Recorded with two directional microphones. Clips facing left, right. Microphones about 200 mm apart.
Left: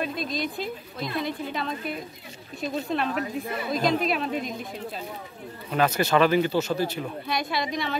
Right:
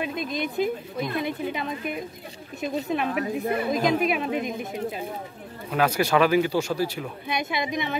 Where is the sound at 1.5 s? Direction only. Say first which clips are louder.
Right 1 dB; 15° right (ahead or behind).